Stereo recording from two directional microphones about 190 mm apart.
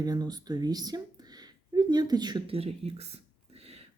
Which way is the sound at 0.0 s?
20° right (ahead or behind).